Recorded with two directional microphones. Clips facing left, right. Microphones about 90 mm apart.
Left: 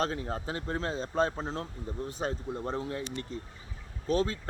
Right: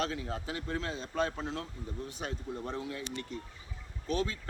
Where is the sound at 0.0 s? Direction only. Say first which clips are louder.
Left 3 dB; 40° left (ahead or behind).